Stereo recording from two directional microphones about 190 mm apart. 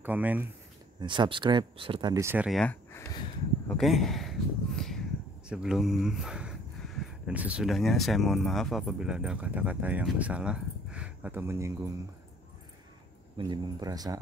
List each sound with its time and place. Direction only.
0.0 s speech: 10° right (ahead or behind)
1.0 s speech: 25° right (ahead or behind)
13.4 s speech: 20° right (ahead or behind)